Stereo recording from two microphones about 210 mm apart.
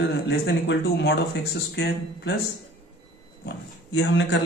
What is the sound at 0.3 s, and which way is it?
Speech, 55° left (ahead or behind).